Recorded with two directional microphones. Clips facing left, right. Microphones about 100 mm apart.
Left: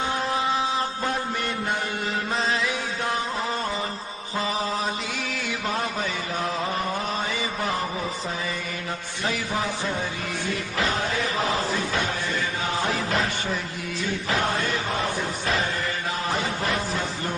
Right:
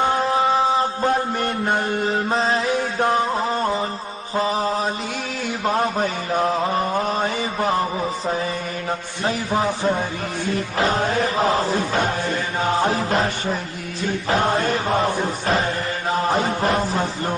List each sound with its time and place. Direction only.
0.3 s mantra: 35° right (ahead or behind); by 2.0 s 50° right (ahead or behind)
2.0 s mantra: 35° right (ahead or behind)
3.1 s music: 40° right (ahead or behind)
4.4 s mantra: 40° right (ahead or behind)
9.2 s a man's voice: 40° right (ahead or behind)
9.6 s speech: 50° right (ahead or behind)